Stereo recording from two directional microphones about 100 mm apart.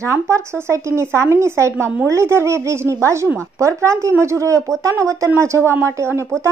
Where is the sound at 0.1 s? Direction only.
30° right (ahead or behind).